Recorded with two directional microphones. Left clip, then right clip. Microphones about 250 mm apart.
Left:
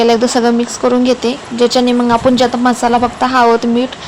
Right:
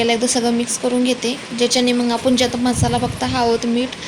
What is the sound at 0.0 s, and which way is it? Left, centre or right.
A woman's voice, centre.